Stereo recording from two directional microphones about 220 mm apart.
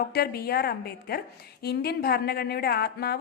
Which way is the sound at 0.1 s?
45° left (ahead or behind).